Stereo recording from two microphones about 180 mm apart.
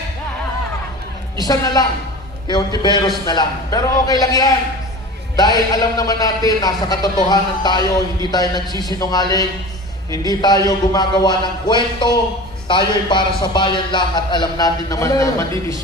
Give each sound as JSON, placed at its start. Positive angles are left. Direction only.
{"t": 1.4, "sound": "a man's voice", "side_deg": 20}